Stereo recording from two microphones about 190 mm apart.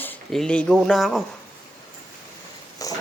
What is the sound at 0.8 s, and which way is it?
Speech, centre (ahead or behind).